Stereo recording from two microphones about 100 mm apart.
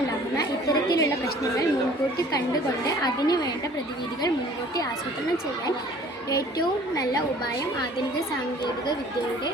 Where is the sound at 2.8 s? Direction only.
40° left (ahead or behind).